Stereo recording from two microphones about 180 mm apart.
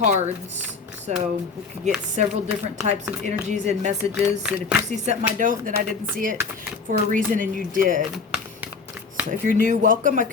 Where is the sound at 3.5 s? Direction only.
40° right (ahead or behind).